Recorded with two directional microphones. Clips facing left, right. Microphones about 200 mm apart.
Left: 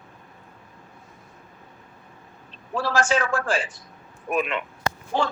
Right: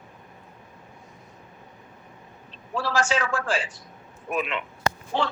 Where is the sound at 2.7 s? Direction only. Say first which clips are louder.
Left 2 dB; 50° left (ahead or behind).